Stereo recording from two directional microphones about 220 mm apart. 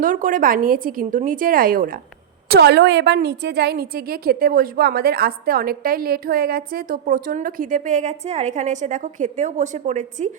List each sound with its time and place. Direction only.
0.0 s a woman's voice: 40° right (ahead or behind)